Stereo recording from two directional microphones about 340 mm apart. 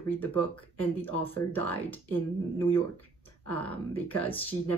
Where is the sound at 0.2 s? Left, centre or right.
Centre.